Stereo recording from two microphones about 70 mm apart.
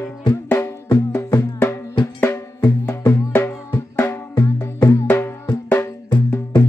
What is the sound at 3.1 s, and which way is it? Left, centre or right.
Drum, left.